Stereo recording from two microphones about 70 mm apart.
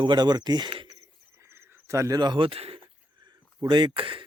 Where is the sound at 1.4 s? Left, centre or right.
Right.